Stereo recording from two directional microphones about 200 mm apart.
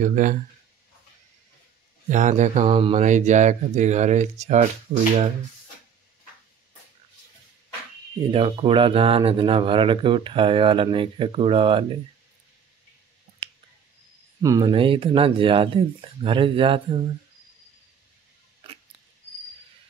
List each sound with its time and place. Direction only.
0.0 s speech: 40° right (ahead or behind)
2.0 s speech: 40° right (ahead or behind)
2.6 s speech: 25° right (ahead or behind)
8.3 s speech: 25° right (ahead or behind)
14.4 s speech: 20° right (ahead or behind)
18.6 s dog: 30° right (ahead or behind)